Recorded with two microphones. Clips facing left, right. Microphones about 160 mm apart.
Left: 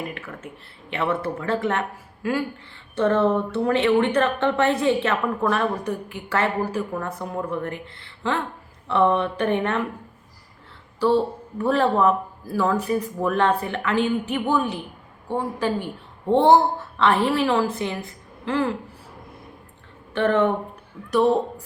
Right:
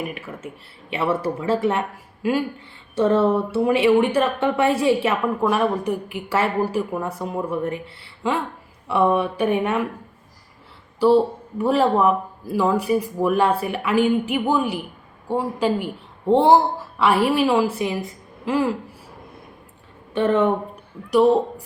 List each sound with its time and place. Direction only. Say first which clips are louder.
0.0 s a woman's voice: right 3 dB; 15° right (ahead or behind)
11.0 s a woman's voice: right 4 dB; 15° right (ahead or behind)
20.1 s a woman's voice: right 1 dB; 20° right (ahead or behind)